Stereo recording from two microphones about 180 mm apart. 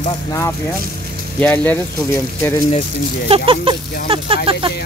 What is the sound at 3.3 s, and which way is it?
Speech, 30° right (ahead or behind).